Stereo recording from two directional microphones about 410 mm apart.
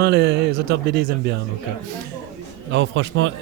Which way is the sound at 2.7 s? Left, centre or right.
Right.